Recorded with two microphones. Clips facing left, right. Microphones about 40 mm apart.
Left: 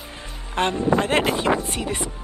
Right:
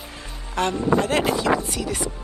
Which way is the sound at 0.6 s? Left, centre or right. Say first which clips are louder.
Even; left.